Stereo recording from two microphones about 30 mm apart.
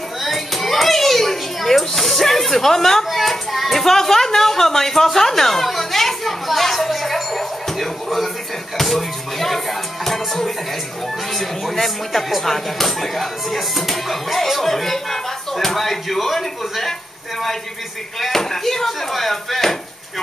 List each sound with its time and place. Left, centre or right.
0.2 s children playing: centre
3.1 s child singing: centre
3.8 s a sound: centre
8.7 s slap: centre
10.0 s music: centre
11.3 s speech: centre
18.2 s speech: centre